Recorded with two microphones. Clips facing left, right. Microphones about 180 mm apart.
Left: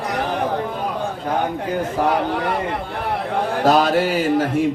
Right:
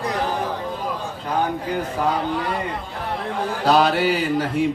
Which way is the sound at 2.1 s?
65° left (ahead or behind).